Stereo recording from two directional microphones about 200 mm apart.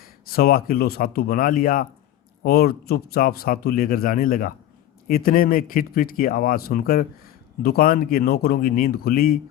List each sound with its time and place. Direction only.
0.0 s a man's voice: 50° left (ahead or behind)